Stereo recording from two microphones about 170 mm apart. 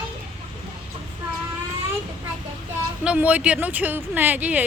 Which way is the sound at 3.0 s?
10° right (ahead or behind).